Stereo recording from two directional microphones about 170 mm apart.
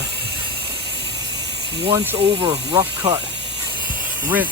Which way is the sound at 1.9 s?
10° right (ahead or behind).